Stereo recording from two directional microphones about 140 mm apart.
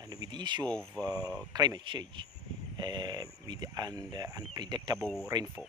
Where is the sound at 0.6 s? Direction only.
5° left (ahead or behind).